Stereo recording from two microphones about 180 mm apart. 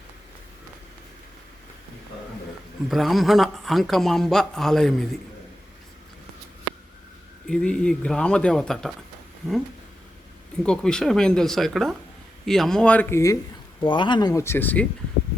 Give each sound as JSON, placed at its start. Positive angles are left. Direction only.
{"t": 2.9, "sound": "speech", "side_deg": 0}
{"t": 7.4, "sound": "speech", "side_deg": 5}
{"t": 10.6, "sound": "speech", "side_deg": 5}
{"t": 13.8, "sound": "speech", "side_deg": 25}